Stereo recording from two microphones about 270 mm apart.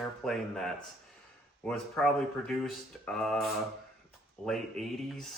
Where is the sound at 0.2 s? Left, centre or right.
Centre.